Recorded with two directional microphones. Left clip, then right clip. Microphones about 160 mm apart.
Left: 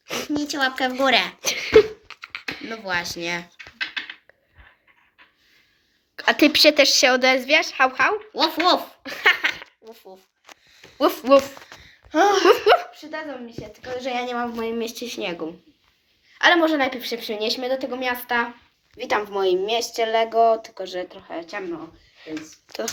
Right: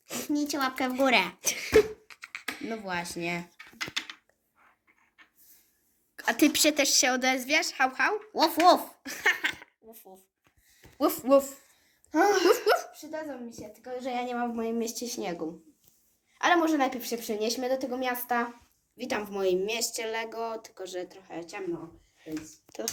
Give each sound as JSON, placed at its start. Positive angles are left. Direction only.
{"t": 0.0, "sound": "a sound", "side_deg": 5}
{"t": 0.3, "sound": "speech", "side_deg": -70}
{"t": 1.4, "sound": "beatboxing", "side_deg": 5}
{"t": 2.8, "sound": "speech", "side_deg": -50}
{"t": 6.1, "sound": "a woman's voice", "side_deg": 5}
{"t": 8.3, "sound": "speech", "side_deg": -55}
{"t": 9.0, "sound": "a sound", "side_deg": 5}
{"t": 10.9, "sound": "a child's voice", "side_deg": 5}
{"t": 12.5, "sound": "a woman's voice", "side_deg": 10}
{"t": 12.9, "sound": "a woman's voice", "side_deg": -10}
{"t": 14.6, "sound": "a woman's voice", "side_deg": -25}
{"t": 18.9, "sound": "speech", "side_deg": 30}
{"t": 22.2, "sound": "a sound", "side_deg": 5}